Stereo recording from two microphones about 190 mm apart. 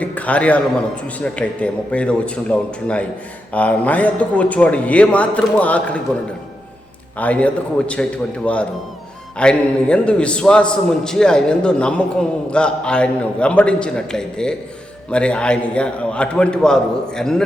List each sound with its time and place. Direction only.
0.0 s a man's voice: 5° left (ahead or behind)
7.2 s speech: 5° left (ahead or behind)
9.4 s a man's voice: 5° left (ahead or behind)